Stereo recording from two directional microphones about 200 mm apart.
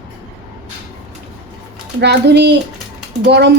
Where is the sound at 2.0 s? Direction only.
55° right (ahead or behind).